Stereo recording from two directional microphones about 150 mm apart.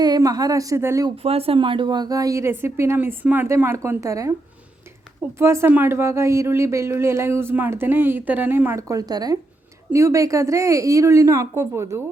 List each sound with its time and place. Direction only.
0.0 s a woman's voice: 25° right (ahead or behind)
1.1 s a woman's voice: 40° right (ahead or behind); by 4.4 s 20° right (ahead or behind)
5.4 s a woman's voice: 15° right (ahead or behind)